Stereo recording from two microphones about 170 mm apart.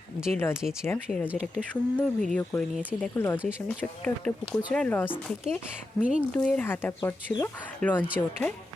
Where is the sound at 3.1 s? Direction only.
15° left (ahead or behind).